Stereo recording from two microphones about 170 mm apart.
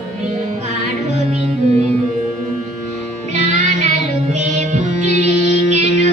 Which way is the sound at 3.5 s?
45° right (ahead or behind).